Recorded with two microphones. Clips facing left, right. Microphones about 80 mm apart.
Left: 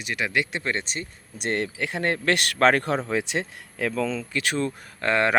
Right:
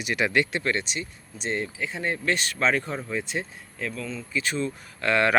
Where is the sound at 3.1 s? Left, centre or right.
Left.